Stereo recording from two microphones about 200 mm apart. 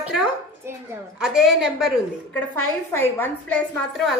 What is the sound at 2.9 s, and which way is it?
A woman's voice, 10° left (ahead or behind).